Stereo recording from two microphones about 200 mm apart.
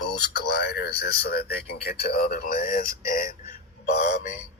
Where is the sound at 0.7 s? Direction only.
55° left (ahead or behind).